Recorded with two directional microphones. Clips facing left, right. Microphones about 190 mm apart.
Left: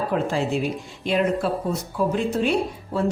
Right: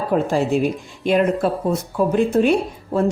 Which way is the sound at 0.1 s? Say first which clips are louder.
Right 8 dB; 45° right (ahead or behind).